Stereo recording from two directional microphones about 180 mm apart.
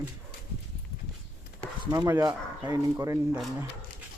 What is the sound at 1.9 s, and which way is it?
Speech, 15° right (ahead or behind).